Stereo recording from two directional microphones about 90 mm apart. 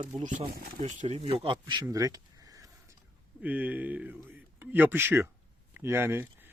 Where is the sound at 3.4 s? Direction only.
15° right (ahead or behind).